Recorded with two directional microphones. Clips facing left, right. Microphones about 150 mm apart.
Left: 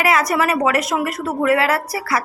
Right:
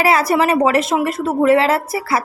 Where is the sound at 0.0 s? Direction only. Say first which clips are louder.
Right 3 dB; 30° right (ahead or behind).